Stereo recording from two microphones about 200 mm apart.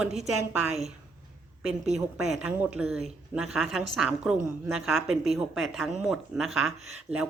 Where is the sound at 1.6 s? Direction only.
5° right (ahead or behind).